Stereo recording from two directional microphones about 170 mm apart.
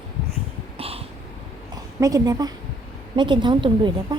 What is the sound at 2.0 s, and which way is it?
A woman's voice, 20° right (ahead or behind).